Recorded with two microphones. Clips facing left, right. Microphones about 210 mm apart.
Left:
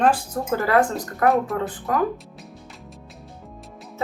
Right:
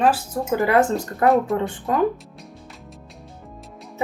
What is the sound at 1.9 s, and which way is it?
Speech, 25° right (ahead or behind).